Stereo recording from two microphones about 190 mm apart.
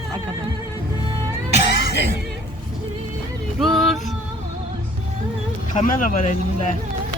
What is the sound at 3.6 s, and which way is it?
Speech, centre (ahead or behind).